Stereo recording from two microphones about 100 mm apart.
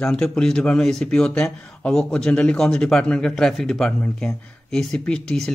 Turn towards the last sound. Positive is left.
turn(degrees=5)  # may be behind; listen again after turning